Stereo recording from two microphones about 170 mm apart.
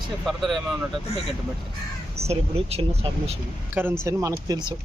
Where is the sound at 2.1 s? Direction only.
35° right (ahead or behind).